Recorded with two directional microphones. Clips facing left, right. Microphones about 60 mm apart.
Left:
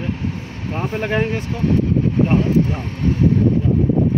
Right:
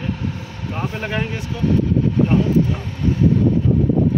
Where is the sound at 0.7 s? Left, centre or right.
Left.